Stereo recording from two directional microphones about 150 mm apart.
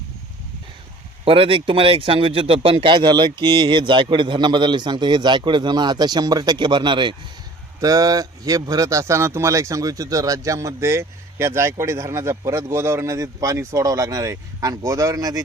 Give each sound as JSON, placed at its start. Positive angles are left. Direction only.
{"t": 1.2, "sound": "a man's voice", "side_deg": -35}